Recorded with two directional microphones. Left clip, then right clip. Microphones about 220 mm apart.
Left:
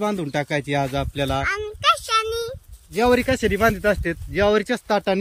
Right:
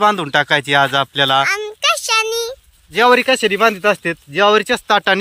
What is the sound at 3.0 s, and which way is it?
Speech, centre (ahead or behind).